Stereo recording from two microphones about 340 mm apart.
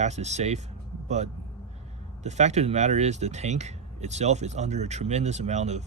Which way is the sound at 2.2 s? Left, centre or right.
Centre.